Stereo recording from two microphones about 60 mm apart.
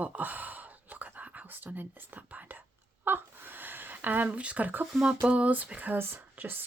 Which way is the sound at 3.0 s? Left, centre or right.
Right.